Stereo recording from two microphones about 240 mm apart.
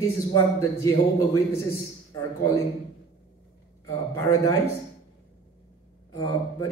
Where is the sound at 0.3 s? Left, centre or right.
Centre.